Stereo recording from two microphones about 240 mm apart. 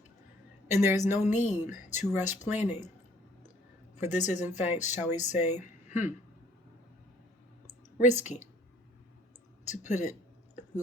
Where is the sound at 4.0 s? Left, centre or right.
Left.